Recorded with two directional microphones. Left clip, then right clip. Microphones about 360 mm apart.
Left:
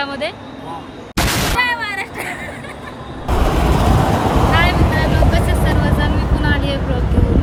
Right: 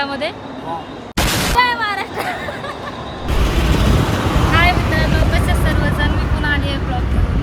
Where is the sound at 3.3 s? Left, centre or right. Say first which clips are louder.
Left 3 dB; left.